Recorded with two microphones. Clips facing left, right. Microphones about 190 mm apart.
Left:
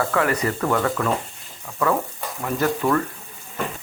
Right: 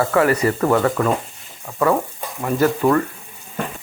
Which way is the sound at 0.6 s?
20° right (ahead or behind).